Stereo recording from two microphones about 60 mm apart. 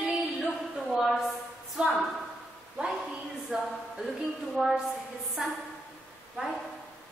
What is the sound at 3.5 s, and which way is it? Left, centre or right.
A woman's voice, centre.